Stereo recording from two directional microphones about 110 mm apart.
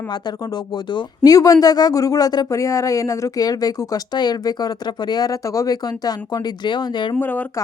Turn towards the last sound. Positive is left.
turn(degrees=15)  # may be behind; listen again after turning